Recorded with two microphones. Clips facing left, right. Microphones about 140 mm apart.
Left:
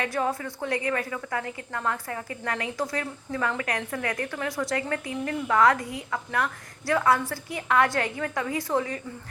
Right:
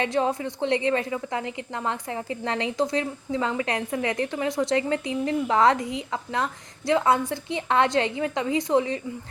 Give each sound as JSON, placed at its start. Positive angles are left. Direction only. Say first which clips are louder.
{"t": 0.0, "sound": "a woman's voice", "louder": "right 3 dB", "side_deg": -20}